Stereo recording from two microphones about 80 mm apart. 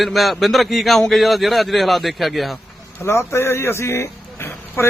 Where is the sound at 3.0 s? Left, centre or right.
Left.